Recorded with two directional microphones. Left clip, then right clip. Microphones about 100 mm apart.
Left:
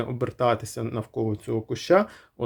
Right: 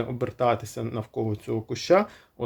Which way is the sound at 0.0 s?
30° left (ahead or behind).